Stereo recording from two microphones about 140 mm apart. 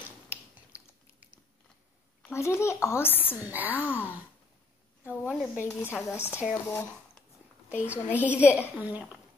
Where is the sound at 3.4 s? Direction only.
10° right (ahead or behind).